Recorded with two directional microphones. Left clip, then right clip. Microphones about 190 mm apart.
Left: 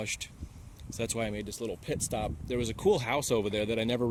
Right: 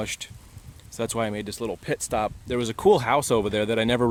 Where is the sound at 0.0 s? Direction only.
30° right (ahead or behind).